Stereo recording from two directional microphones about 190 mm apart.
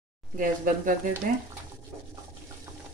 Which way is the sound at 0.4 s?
45° right (ahead or behind).